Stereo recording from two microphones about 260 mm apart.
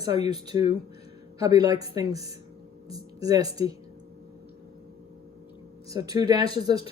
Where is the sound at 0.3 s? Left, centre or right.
Centre.